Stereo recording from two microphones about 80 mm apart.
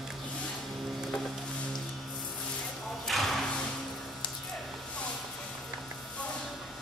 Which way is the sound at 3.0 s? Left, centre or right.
Centre.